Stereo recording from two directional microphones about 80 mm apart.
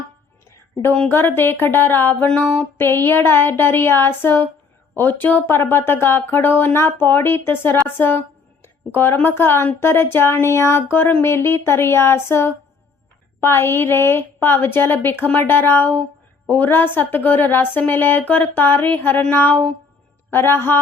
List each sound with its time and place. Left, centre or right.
1.1 s a woman's voice: left
8.6 s a sound: left
9.1 s a woman's voice: left